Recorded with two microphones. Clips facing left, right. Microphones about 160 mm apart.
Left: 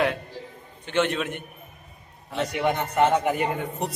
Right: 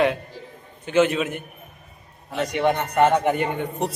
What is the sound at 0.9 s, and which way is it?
A man's voice, 5° right (ahead or behind).